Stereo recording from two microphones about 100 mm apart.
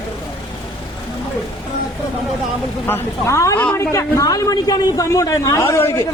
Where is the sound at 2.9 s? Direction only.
30° left (ahead or behind).